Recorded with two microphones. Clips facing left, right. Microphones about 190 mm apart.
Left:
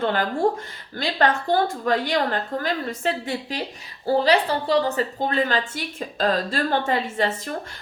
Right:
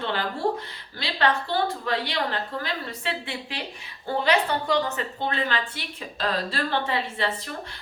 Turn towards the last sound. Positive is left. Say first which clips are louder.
# left 4 dB
turn(degrees=45)  # may be behind; listen again after turning